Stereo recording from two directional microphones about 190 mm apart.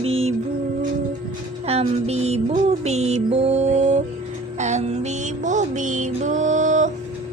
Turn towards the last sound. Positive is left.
turn(degrees=-40)  # may be behind; listen again after turning